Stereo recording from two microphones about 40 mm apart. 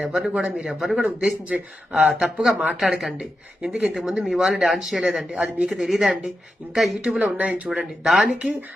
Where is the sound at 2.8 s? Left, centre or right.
Centre.